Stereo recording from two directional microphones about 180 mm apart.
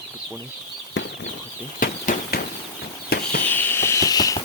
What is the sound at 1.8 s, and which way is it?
Bird flight, 50° left (ahead or behind).